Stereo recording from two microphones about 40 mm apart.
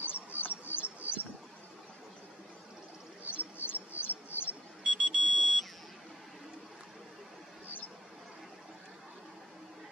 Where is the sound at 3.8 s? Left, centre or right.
Left.